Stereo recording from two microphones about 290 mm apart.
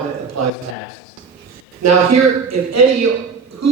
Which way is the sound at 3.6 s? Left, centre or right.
Right.